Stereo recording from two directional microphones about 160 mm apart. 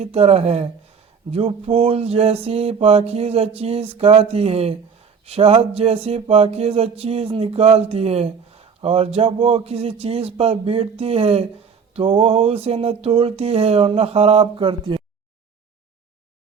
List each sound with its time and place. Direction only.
0.0 s mantra: 40° right (ahead or behind)